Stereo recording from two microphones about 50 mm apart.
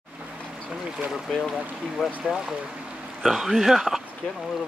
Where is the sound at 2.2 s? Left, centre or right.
Centre.